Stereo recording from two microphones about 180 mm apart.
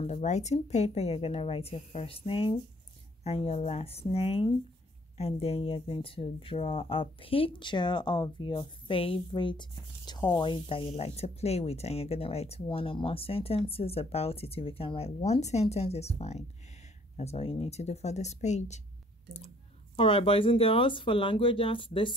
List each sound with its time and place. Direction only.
0.0 s speech: 40° left (ahead or behind)
20.0 s speech: 30° left (ahead or behind)